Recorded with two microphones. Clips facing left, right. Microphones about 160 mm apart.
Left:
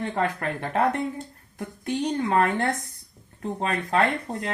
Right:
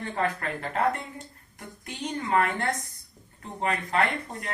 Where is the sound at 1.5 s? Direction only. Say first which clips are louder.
Left 11 dB; 75° left (ahead or behind).